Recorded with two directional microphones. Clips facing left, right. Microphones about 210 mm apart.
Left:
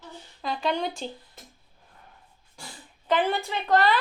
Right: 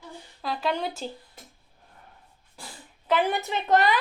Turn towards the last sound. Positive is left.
turn(degrees=-15)  # may be behind; listen again after turning